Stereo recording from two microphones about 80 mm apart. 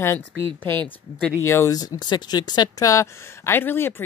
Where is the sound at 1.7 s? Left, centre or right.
Left.